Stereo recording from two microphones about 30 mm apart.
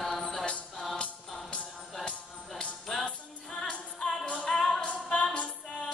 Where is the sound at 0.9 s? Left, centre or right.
Left.